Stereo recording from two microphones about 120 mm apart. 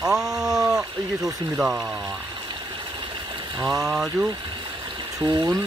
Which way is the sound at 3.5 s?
30° right (ahead or behind).